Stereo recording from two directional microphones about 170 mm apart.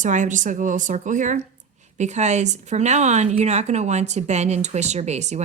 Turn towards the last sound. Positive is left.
turn(degrees=-40)  # may be behind; listen again after turning